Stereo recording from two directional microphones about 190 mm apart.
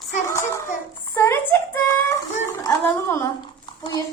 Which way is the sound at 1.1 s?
10° left (ahead or behind).